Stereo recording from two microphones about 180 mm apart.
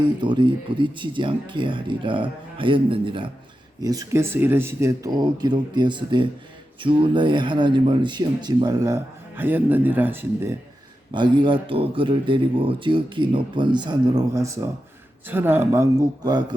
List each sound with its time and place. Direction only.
0.0 s speech: 25° right (ahead or behind)
11.1 s speech: 25° right (ahead or behind)